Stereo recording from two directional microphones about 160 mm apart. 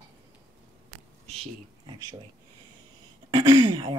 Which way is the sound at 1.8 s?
20° right (ahead or behind).